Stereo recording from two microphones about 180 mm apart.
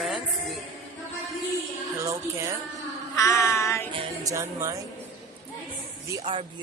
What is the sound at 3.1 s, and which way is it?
Child singing, 15° left (ahead or behind).